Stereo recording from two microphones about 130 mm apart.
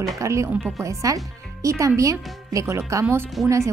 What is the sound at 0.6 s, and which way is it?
Speech, centre (ahead or behind).